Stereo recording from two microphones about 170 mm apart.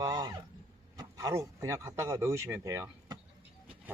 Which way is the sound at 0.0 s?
25° right (ahead or behind).